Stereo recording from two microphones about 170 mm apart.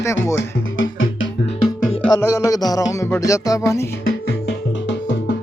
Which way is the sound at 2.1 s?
20° left (ahead or behind).